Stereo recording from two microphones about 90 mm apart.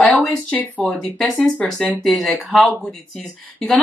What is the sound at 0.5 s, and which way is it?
Speech, 20° left (ahead or behind).